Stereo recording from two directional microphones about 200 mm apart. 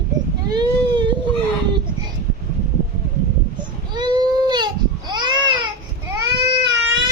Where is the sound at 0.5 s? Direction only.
20° right (ahead or behind).